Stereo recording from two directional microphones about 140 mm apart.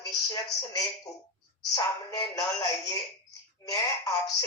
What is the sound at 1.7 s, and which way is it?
Speech, 25° left (ahead or behind).